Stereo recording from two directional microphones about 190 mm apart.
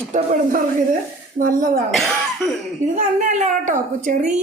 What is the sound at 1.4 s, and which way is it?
Speech, 45° right (ahead or behind).